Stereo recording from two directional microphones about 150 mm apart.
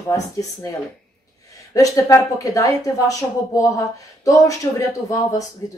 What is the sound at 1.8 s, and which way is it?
Speech, 20° left (ahead or behind).